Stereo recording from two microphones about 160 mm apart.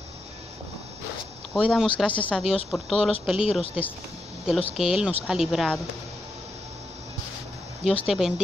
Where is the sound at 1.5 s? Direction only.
5° right (ahead or behind).